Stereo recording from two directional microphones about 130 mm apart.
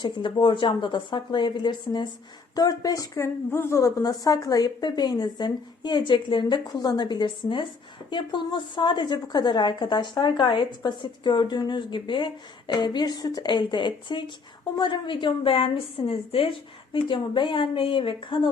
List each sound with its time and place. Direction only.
0.0 s a woman's voice: 40° left (ahead or behind)